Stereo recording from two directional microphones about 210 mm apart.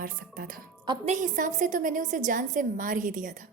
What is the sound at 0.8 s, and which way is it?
Speech, 20° right (ahead or behind).